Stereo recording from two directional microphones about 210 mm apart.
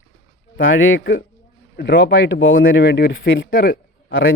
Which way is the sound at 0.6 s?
70° left (ahead or behind).